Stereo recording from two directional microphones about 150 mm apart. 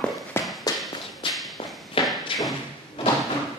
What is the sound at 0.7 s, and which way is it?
Walk, 25° left (ahead or behind).